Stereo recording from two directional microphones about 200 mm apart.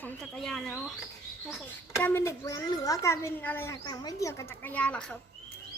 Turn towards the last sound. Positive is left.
turn(degrees=5)  # may be behind; listen again after turning